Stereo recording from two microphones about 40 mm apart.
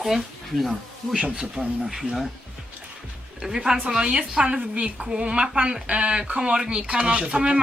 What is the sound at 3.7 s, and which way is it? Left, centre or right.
Speech, right.